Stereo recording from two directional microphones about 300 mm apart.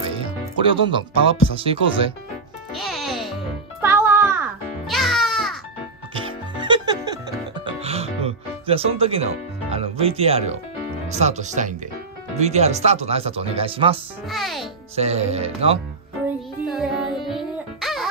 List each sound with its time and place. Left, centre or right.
0.0 s music: centre
1.6 s speech: centre
2.7 s music: centre
6.1 s music: centre
11.1 s speech: right
14.3 s a child's voice: centre
15.0 s speech: right
16.3 s music: centre